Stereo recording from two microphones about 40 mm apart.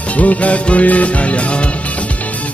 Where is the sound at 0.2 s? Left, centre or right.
Left.